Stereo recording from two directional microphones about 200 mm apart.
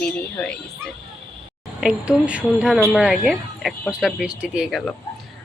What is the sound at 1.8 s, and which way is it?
Speech, 5° right (ahead or behind).